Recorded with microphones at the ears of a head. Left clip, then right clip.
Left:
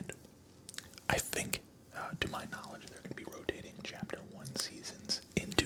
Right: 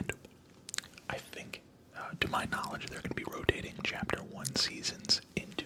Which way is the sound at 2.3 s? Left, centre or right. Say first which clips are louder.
Right 9 dB; right.